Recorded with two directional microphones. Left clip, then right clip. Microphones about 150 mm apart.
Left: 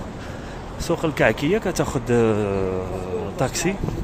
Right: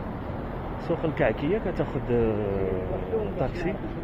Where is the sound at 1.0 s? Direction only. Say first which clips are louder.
Left 6 dB; 65° left (ahead or behind).